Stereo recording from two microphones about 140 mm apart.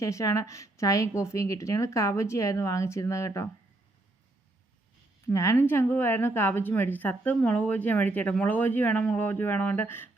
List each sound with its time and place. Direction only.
0.0 s speech: 20° left (ahead or behind)
5.2 s a woman's voice: 20° left (ahead or behind)